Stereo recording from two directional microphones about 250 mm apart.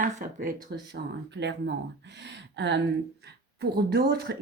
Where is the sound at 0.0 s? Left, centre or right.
Right.